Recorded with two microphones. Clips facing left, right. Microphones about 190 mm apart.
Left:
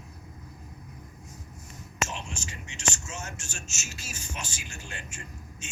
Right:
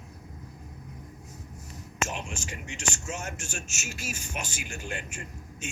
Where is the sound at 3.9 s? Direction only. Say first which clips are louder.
Right 7 dB; 40° left (ahead or behind).